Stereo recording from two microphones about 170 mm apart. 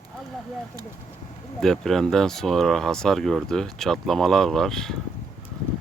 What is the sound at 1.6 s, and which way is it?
Speech, centre (ahead or behind).